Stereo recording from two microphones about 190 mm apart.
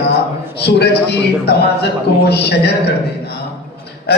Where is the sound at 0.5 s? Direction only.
60° left (ahead or behind).